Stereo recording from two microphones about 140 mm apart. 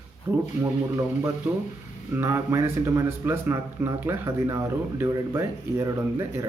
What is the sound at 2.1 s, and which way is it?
Speech, 20° right (ahead or behind).